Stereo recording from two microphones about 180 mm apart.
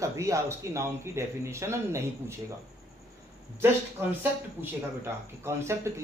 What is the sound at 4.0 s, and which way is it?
Speech, 15° right (ahead or behind).